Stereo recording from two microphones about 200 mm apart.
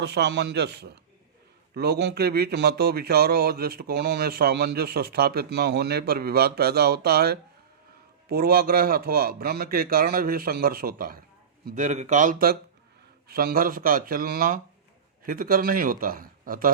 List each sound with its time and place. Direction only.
0.0 s speech: 55° right (ahead or behind)